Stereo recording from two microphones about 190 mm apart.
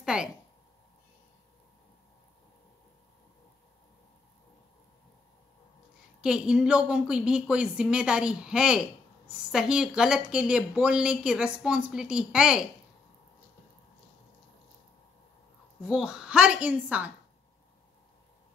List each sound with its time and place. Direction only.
0.0 s a sound: 5° right (ahead or behind)
6.2 s speech: 5° right (ahead or behind)
15.8 s speech: 5° right (ahead or behind)